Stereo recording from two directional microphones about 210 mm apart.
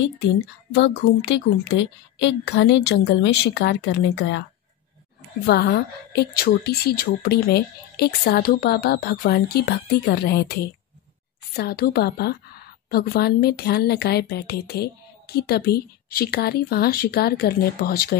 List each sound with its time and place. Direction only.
0.7 s a woman's voice: 55° left (ahead or behind)
5.5 s a woman's voice: 50° left (ahead or behind)
11.5 s a woman's voice: 45° left (ahead or behind)